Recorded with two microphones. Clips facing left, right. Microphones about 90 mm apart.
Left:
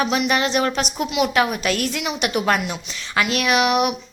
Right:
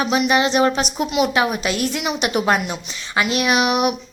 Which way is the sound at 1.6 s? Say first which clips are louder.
Right 1 dB; 20° right (ahead or behind).